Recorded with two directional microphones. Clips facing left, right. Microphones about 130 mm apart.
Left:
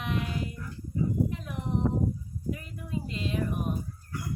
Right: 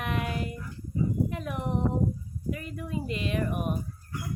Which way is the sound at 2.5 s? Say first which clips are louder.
Right 2 dB; 70° right (ahead or behind).